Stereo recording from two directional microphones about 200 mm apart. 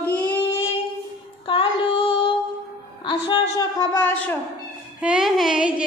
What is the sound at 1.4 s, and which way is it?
Child singing, 25° left (ahead or behind).